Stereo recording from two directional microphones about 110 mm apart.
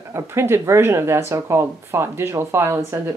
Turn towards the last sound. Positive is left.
turn(degrees=-20)  # may be behind; listen again after turning